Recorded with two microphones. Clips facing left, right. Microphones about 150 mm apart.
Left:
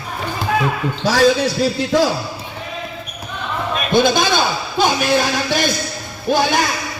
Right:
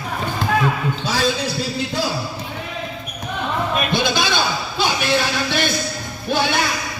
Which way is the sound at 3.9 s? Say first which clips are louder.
Left 5 dB; 50° left (ahead or behind).